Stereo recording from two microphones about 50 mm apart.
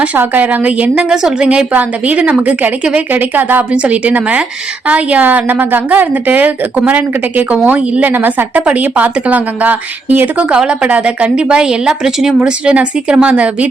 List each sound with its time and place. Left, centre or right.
0.2 s a woman's voice: right
1.1 s a woman's voice: centre
1.5 s a woman's voice: right
3.8 s a woman's voice: right
8.1 s a woman's voice: right
8.6 s a woman's voice: right
10.5 s a woman's voice: centre
12.4 s a woman's voice: right